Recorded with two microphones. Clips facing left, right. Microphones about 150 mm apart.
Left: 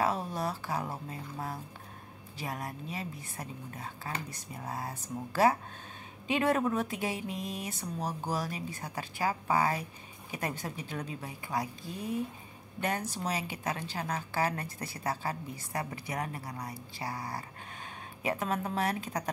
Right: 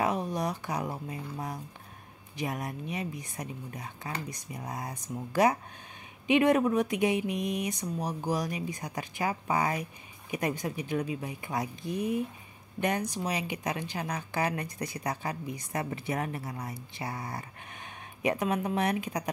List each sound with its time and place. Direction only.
0.0 s a woman's voice: 15° right (ahead or behind)